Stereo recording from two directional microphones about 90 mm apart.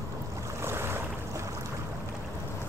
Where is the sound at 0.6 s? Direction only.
25° right (ahead or behind).